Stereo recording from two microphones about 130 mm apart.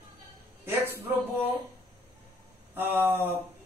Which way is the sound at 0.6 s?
15° right (ahead or behind).